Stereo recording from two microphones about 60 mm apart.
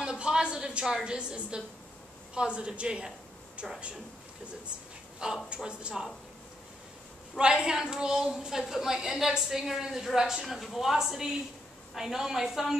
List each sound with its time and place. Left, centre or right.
0.0 s a woman's voice: centre
5.2 s a woman's voice: centre
7.3 s a woman's voice: centre